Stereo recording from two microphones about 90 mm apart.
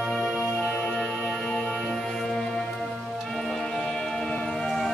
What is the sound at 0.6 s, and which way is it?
Music, 25° left (ahead or behind).